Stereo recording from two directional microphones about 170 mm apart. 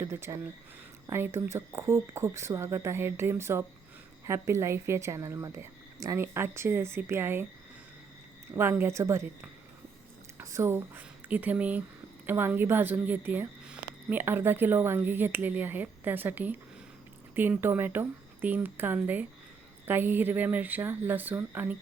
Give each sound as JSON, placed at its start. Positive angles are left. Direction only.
{"t": 0.0, "sound": "speech", "side_deg": -15}
{"t": 8.5, "sound": "speech", "side_deg": -15}